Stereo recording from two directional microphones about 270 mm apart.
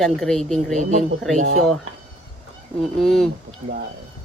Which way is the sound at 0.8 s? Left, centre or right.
Right.